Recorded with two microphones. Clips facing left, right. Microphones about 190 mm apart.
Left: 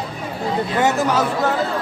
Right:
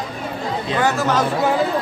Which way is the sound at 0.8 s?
15° left (ahead or behind).